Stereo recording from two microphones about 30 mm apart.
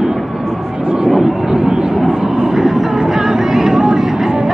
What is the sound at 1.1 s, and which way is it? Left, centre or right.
Vehicle, right.